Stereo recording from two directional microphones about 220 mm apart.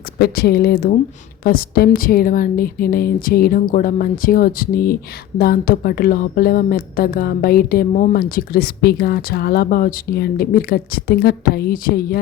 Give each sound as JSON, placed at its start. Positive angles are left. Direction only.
{"t": 0.2, "sound": "a woman's voice", "side_deg": 45}